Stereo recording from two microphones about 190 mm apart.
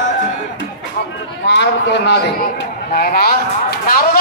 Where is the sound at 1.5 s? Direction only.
65° left (ahead or behind).